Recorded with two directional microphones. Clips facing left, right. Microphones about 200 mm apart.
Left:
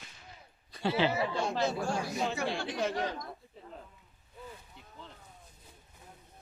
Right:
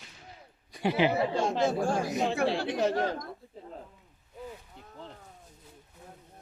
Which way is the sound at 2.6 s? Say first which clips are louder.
Right 5 dB; 50° right (ahead or behind).